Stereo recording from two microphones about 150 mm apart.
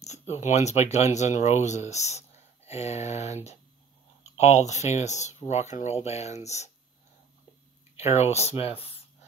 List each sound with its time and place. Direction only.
0.0 s speech: 50° left (ahead or behind)
7.9 s speech: 45° left (ahead or behind)